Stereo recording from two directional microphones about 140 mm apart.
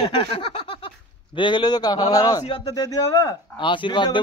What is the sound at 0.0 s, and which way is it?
A man's voice, 35° left (ahead or behind).